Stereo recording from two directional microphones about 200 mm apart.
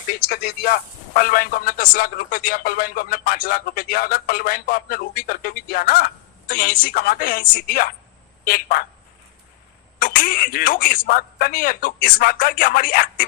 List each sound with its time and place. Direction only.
0.3 s speech: 50° left (ahead or behind)
10.0 s speech: 45° left (ahead or behind)